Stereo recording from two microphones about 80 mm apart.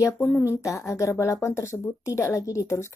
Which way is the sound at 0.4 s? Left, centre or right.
Left.